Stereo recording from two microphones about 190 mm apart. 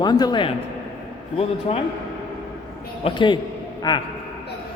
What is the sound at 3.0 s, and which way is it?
Speech, 25° left (ahead or behind).